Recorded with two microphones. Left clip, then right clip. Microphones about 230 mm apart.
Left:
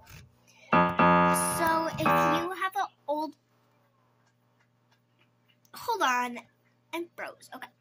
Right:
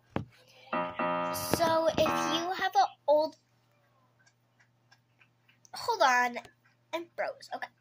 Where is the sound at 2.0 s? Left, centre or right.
Left.